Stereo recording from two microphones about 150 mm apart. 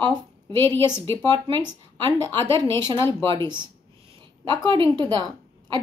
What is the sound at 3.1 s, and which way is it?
Speech, 30° right (ahead or behind).